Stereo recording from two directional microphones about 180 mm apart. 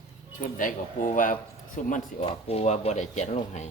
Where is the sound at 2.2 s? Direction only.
35° left (ahead or behind).